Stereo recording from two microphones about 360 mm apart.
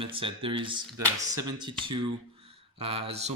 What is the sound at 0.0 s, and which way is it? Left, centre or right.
Speech, centre.